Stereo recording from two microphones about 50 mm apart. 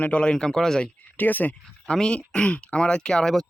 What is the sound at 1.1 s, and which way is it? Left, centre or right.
Speech, left.